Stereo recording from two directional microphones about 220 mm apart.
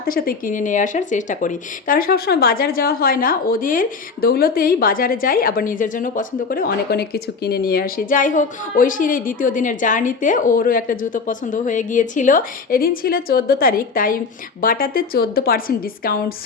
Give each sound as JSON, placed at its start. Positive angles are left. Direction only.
{"t": 0.0, "sound": "speech", "side_deg": 40}